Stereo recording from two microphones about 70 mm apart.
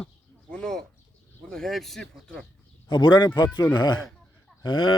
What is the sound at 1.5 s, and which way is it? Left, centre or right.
Speech, centre.